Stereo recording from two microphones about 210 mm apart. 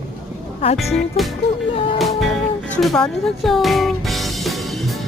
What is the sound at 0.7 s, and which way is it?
Speech, centre (ahead or behind).